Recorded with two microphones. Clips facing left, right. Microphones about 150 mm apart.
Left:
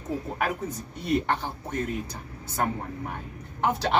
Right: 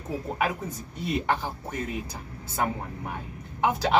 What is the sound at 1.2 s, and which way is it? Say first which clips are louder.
Speech: right 1 dB; 10° right (ahead or behind).